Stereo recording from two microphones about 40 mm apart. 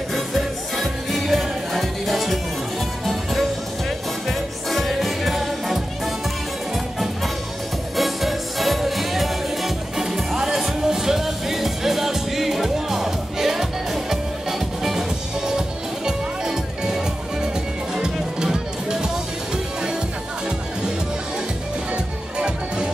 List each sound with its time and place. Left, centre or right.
0.1 s music: centre
4.3 s music: centre
7.9 s music: centre
21.9 s music: right